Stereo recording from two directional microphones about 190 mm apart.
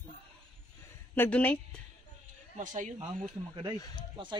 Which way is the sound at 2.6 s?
40° right (ahead or behind).